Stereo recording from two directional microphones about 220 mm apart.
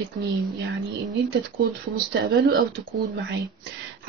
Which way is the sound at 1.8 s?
40° right (ahead or behind).